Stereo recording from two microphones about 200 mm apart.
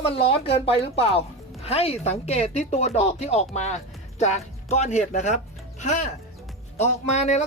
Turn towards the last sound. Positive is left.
turn(degrees=35)  # may be behind; listen again after turning